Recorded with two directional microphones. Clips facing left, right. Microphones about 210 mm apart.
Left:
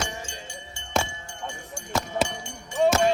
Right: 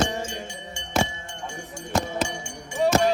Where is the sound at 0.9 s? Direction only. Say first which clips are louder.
Right 3 dB; 5° right (ahead or behind).